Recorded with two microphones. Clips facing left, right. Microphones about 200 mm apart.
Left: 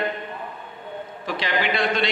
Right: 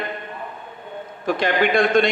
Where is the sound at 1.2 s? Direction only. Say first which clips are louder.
Right 6 dB; 50° right (ahead or behind).